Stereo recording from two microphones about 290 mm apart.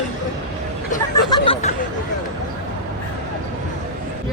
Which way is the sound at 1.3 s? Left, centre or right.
Centre.